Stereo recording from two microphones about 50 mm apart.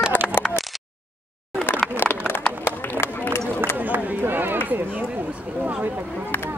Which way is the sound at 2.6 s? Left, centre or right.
Left.